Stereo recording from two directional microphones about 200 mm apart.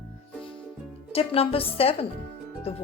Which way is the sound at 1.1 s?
30° left (ahead or behind).